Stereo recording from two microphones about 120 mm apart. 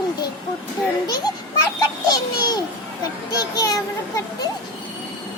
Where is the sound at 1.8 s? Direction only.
35° left (ahead or behind).